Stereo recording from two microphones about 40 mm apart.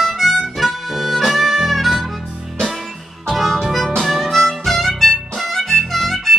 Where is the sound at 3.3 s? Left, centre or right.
Centre.